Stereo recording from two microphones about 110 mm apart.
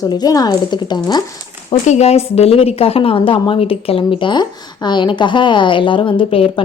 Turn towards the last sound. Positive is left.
turn(degrees=55)  # may be behind; listen again after turning